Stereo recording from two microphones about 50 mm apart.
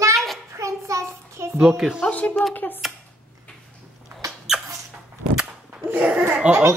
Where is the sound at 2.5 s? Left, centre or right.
Left.